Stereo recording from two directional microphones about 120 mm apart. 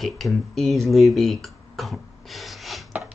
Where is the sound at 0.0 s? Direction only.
Centre (ahead or behind).